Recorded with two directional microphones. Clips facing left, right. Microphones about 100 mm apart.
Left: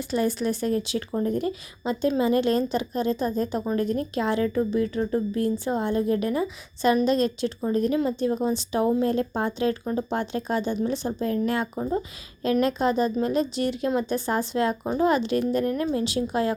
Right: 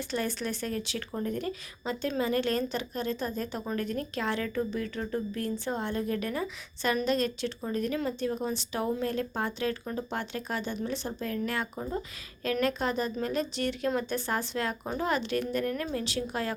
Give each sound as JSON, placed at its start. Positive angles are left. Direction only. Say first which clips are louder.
{"t": 0.1, "sound": "speech", "louder": "left 9 dB", "side_deg": 10}